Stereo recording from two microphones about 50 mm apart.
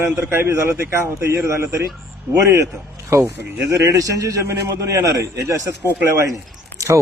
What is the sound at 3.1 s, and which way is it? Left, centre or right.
A man's voice, right.